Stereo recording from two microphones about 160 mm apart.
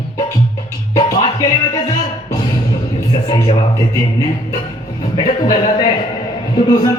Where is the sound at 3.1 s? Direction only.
30° left (ahead or behind).